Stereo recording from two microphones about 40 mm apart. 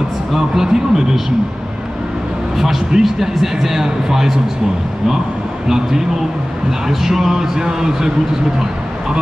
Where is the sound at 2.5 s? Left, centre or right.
Centre.